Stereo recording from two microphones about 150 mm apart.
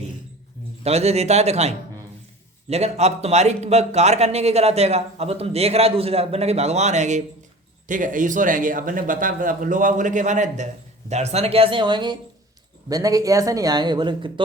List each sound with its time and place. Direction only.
0.9 s a man's voice: 45° right (ahead or behind)